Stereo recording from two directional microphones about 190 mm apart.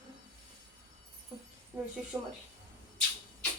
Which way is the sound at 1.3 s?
30° right (ahead or behind).